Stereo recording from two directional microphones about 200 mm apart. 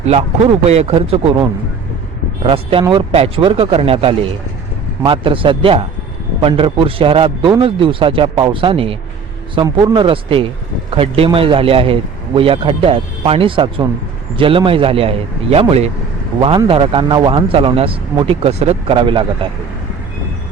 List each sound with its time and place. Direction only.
0.0 s a man's voice: 30° right (ahead or behind)